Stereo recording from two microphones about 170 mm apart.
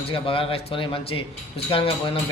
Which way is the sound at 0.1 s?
30° left (ahead or behind).